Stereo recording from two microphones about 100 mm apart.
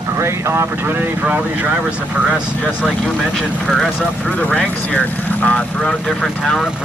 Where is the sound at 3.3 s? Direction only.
Centre (ahead or behind).